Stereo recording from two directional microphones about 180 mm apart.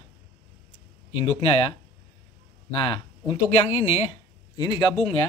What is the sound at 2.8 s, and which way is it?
Speech, 35° left (ahead or behind).